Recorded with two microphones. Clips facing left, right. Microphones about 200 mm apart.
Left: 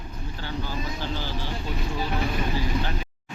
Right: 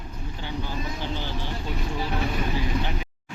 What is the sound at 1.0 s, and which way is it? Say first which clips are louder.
Vehicle: even; 20° right (ahead or behind).